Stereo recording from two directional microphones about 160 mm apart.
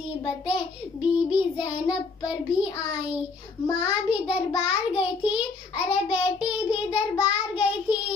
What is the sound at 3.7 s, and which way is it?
Child singing, 10° right (ahead or behind).